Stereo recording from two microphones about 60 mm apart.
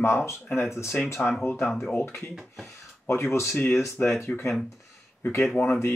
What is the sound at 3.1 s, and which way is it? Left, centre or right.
Speech, left.